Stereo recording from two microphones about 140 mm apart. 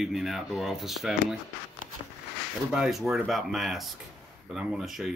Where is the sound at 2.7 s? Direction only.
5° right (ahead or behind).